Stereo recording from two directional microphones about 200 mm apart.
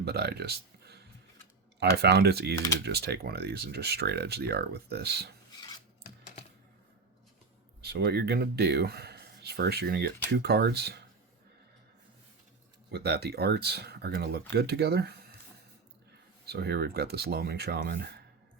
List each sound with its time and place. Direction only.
0.0 s speech: 55° right (ahead or behind)
5.5 s filing: 25° left (ahead or behind)
7.8 s speech: 55° right (ahead or behind)
12.9 s speech: 55° right (ahead or behind)
16.5 s speech: 55° right (ahead or behind)